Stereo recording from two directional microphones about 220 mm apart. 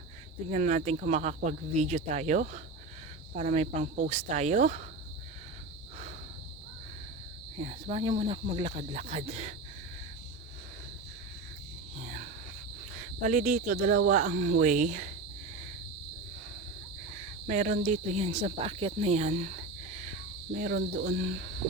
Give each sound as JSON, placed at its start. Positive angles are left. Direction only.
{"t": 0.5, "sound": "speech", "side_deg": -35}
{"t": 7.6, "sound": "speech", "side_deg": -25}
{"t": 12.0, "sound": "cricket", "side_deg": -35}
{"t": 13.0, "sound": "speech", "side_deg": -35}
{"t": 17.5, "sound": "speech", "side_deg": -35}